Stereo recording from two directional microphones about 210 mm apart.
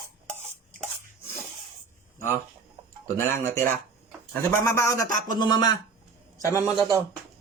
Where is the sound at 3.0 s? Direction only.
10° left (ahead or behind).